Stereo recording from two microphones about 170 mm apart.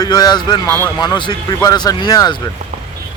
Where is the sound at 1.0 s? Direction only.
25° left (ahead or behind).